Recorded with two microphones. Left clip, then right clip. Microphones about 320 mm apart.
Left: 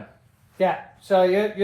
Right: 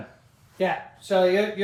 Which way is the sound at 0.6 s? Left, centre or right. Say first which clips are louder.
Left 3 dB; centre.